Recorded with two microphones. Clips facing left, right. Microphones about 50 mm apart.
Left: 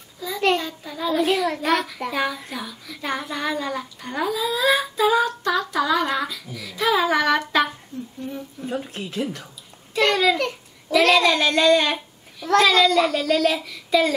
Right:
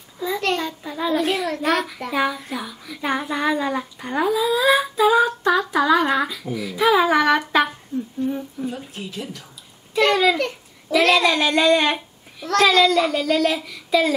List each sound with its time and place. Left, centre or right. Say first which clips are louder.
0.2 s a sound: left 1 dB; right
1.2 s a child's voice: even; centre
5.4 s a child's voice: right 3 dB; centre
8.6 s speech: left 1 dB; left
9.9 s a child's voice: right 2 dB; centre